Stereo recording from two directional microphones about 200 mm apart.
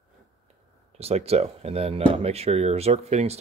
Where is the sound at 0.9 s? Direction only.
30° right (ahead or behind).